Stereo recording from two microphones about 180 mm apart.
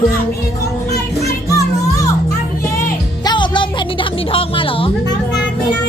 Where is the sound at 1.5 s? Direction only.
20° left (ahead or behind).